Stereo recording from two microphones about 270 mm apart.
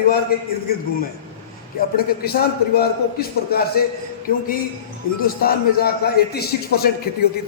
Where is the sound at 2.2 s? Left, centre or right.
Left.